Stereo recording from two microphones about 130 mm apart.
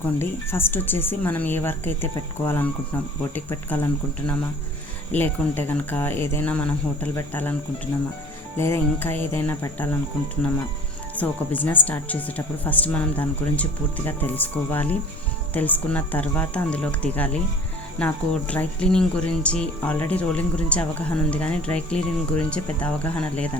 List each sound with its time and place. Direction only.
0.0 s speech: 15° left (ahead or behind)
5.1 s speech: 15° left (ahead or behind)
8.5 s music: 20° left (ahead or behind)
9.3 s speech: 20° left (ahead or behind)
11.2 s speech: 10° left (ahead or behind)